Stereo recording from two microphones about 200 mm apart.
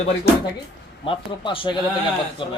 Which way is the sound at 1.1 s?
25° left (ahead or behind).